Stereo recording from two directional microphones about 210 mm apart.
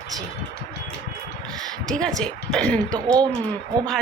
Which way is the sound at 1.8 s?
5° left (ahead or behind).